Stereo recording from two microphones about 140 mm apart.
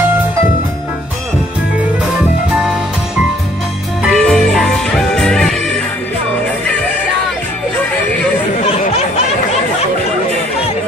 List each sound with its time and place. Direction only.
2.5 s music: 5° right (ahead or behind)
4.1 s music: 5° left (ahead or behind)
8.8 s a sound: 50° left (ahead or behind)